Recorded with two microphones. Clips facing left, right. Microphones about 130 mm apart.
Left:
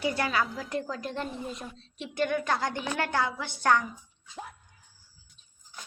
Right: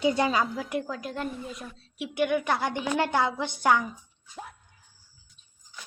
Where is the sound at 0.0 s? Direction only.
20° right (ahead or behind).